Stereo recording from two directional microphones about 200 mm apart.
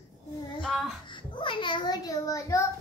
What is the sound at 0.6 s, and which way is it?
Child singing, centre (ahead or behind).